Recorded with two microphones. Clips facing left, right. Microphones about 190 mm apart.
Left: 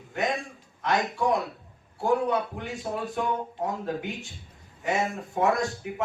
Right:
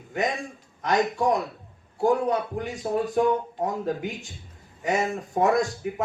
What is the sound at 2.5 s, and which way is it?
Speech, 45° right (ahead or behind).